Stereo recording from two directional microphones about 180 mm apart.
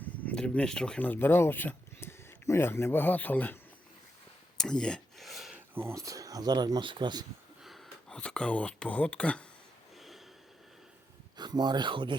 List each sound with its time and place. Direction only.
0.0 s speech: 5° left (ahead or behind)
4.5 s a sound: 5° left (ahead or behind)
5.7 s speech: 15° right (ahead or behind)
7.6 s speech: centre (ahead or behind)
11.3 s speech: 25° right (ahead or behind)